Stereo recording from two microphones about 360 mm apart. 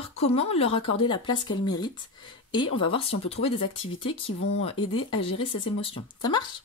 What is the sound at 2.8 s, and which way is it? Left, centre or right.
Speech, centre.